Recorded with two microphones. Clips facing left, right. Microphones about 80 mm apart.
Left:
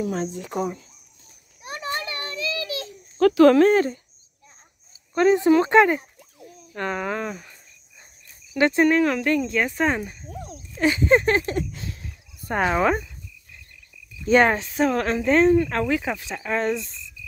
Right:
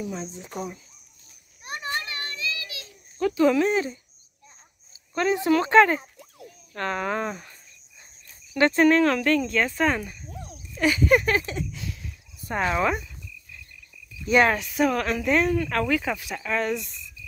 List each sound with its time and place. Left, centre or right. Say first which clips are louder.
0.0 s speech: left 7 dB; left
3.2 s speech: left 7 dB; left
3.5 s speech: left 6 dB; left
5.1 s speech: left 5 dB; left; by 7.1 s centre
7.1 s speech: even; centre
8.5 s speech: even; centre
10.3 s a sound: left 4 dB; centre
10.8 s speech: left 2 dB; left
11.8 s a sound: even; left
12.5 s speech: left 3 dB; left
14.2 s speech: left 2 dB; left